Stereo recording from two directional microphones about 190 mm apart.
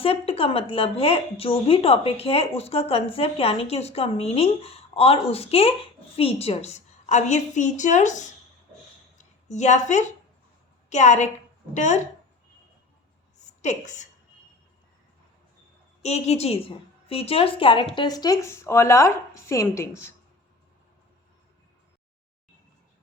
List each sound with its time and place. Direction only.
0.0 s a woman's voice: 30° left (ahead or behind)
9.1 s a sound: 40° left (ahead or behind)
10.8 s a woman's voice: 40° left (ahead or behind)
13.6 s a woman's voice: 40° left (ahead or behind)
16.0 s a woman's voice: 35° left (ahead or behind); by 20.1 s 15° left (ahead or behind)